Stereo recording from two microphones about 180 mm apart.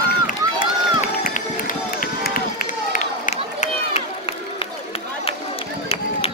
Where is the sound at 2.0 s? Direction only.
55° left (ahead or behind); by 4.7 s 35° left (ahead or behind).